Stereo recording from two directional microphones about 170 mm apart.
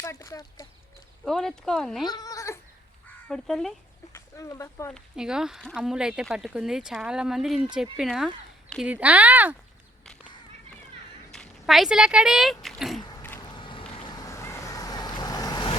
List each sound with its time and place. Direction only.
0.0 s speech: 15° left (ahead or behind)
1.2 s speech: centre (ahead or behind)
2.0 s speech: 20° left (ahead or behind)
3.2 s speech: centre (ahead or behind)
4.1 s speech: 20° left (ahead or behind)
4.9 s speech: 5° right (ahead or behind)
11.3 s speech: centre (ahead or behind)
13.0 s mechanisms: 25° left (ahead or behind)
13.5 s vehicle: 30° left (ahead or behind)